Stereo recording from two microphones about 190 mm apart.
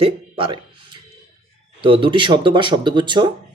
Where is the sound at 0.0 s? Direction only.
30° right (ahead or behind).